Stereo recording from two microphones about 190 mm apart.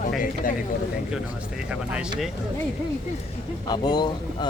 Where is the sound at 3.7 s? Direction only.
20° left (ahead or behind).